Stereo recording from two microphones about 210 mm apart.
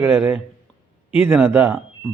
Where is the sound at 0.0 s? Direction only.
10° right (ahead or behind).